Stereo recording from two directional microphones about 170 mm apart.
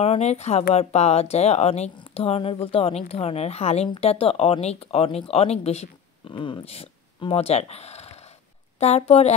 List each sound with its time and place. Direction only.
0.0 s speech: 40° left (ahead or behind)